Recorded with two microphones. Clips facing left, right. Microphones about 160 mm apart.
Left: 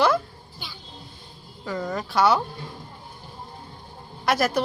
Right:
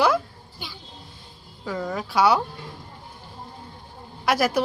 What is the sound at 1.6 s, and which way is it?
Speech, 5° right (ahead or behind).